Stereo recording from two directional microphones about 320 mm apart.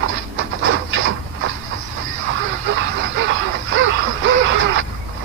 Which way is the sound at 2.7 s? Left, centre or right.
Right.